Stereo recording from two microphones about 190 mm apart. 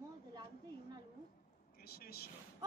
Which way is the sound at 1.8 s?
55° left (ahead or behind).